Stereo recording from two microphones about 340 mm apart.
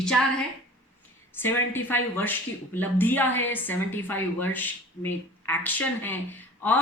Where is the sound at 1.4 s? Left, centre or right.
Centre.